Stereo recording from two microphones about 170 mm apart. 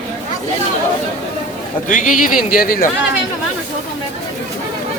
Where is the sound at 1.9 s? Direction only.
50° left (ahead or behind).